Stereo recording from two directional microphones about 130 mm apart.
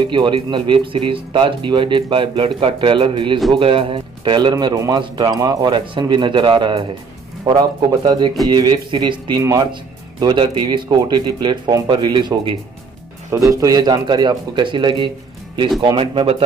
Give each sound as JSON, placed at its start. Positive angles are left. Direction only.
{"t": 0.1, "sound": "speech", "side_deg": -35}
{"t": 13.3, "sound": "speech", "side_deg": -25}